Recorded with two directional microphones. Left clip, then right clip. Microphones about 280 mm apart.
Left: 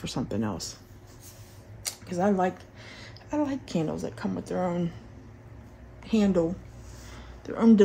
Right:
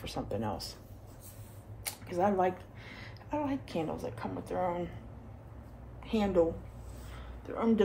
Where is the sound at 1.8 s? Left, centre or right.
Left.